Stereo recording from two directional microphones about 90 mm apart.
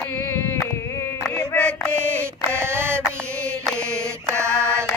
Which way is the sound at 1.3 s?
10° left (ahead or behind).